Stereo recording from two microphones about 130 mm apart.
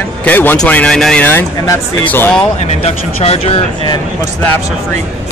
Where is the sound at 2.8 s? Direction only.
50° left (ahead or behind).